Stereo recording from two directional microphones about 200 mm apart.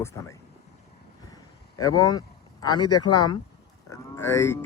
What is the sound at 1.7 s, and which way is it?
A man's voice, 20° left (ahead or behind).